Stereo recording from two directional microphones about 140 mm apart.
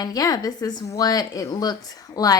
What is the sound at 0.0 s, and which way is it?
A woman's voice, 25° left (ahead or behind).